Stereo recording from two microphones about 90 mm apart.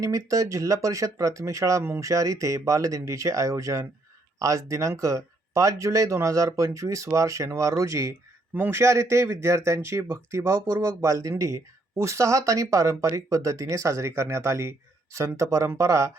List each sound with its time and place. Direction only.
0.0 s speech: 40° right (ahead or behind)
8.5 s speech: 25° right (ahead or behind)